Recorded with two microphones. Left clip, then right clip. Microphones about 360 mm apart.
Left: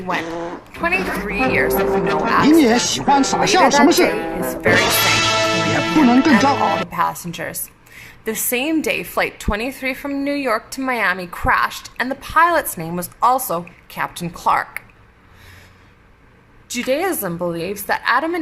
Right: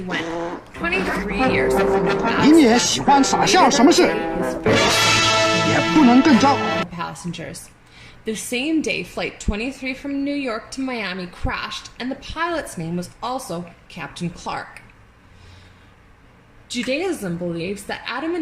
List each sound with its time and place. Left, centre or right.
0.1 s a woman's voice: centre
7.0 s a woman's voice: centre
13.5 s a woman's voice: left
14.1 s a woman's voice: centre
16.6 s a woman's voice: centre